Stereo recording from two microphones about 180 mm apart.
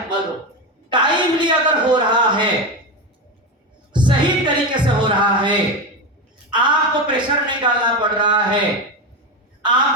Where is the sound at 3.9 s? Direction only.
25° right (ahead or behind).